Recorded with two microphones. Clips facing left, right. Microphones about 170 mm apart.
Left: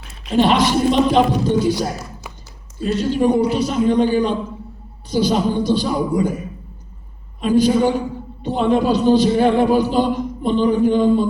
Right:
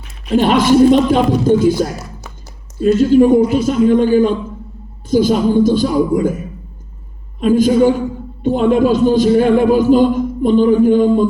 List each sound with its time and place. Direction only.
0.3 s a man's voice: 45° right (ahead or behind)
2.8 s a man's voice: 45° right (ahead or behind)
7.4 s a man's voice: 45° right (ahead or behind)